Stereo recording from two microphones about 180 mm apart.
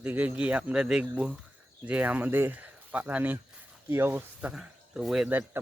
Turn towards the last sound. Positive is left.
turn(degrees=-10)  # may be behind; listen again after turning